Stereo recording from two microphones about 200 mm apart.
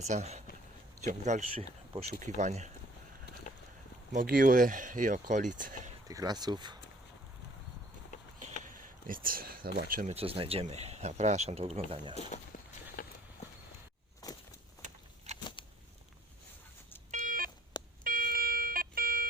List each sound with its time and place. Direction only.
0.0 s speech: 35° right (ahead or behind)
4.1 s speech: 45° right (ahead or behind)
6.1 s speech: 20° right (ahead or behind)
9.0 s speech: 45° right (ahead or behind)
10.2 s speech: 30° right (ahead or behind)
13.0 s horse: 45° left (ahead or behind)
14.2 s a sound: 20° left (ahead or behind)
15.3 s a sound: 35° right (ahead or behind)
17.1 s a sound: 45° right (ahead or behind)